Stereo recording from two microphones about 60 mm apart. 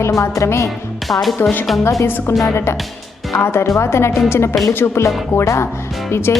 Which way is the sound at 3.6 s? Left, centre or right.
Left.